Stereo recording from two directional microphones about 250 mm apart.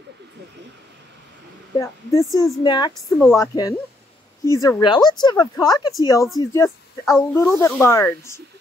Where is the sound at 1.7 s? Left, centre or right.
Centre.